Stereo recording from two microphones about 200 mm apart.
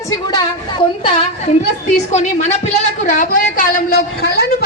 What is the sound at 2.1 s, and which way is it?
A woman's voice, 35° left (ahead or behind).